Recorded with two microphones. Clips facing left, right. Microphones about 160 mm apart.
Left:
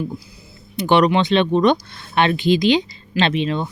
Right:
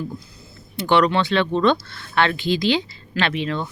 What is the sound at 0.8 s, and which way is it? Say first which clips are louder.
Speech: left 2 dB; 20° left (ahead or behind).